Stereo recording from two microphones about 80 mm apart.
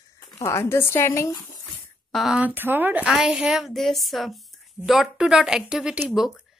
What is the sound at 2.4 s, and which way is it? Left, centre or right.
Speech, right.